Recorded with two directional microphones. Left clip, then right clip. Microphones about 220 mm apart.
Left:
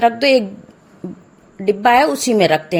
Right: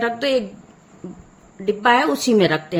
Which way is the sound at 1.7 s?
25° left (ahead or behind).